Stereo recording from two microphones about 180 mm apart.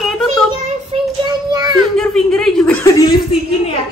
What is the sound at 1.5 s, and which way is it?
Speech, 20° right (ahead or behind).